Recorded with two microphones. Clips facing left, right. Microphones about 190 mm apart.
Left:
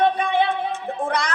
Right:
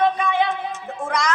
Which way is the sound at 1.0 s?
35° left (ahead or behind).